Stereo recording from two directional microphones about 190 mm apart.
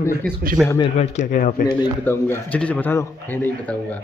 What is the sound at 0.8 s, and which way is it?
Speech, 40° left (ahead or behind).